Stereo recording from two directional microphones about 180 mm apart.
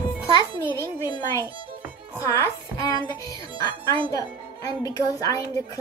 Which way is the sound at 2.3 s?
20° left (ahead or behind).